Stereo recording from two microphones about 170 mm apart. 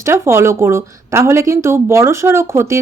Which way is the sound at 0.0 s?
15° right (ahead or behind).